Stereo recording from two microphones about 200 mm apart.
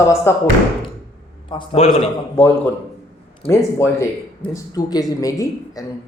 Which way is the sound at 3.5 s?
15° left (ahead or behind).